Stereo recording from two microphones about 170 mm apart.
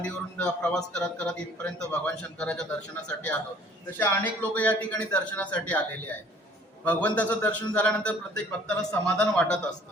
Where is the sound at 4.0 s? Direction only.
10° left (ahead or behind).